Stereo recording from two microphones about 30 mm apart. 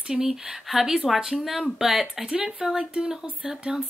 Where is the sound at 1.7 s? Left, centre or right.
Centre.